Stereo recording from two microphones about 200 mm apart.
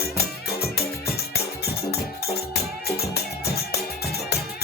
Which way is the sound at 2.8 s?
50° left (ahead or behind).